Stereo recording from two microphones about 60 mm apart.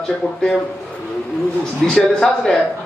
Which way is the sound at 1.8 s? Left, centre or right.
Centre.